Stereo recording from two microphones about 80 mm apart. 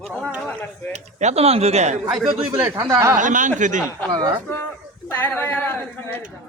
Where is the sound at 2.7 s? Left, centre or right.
Right.